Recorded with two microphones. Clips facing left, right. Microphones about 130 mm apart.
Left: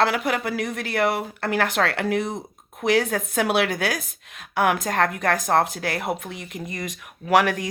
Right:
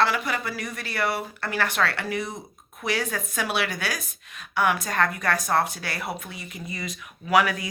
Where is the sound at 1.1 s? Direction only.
90° left.